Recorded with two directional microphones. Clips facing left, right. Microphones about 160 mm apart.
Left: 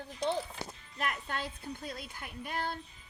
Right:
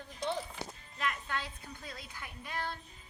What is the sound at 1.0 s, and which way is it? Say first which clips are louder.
Child singing: left 1 dB; 45° left (ahead or behind).